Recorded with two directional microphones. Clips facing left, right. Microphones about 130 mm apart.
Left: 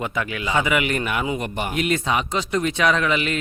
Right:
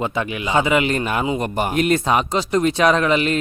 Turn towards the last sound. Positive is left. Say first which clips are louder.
# right 4 dB
turn(degrees=-40)  # may be behind; listen again after turning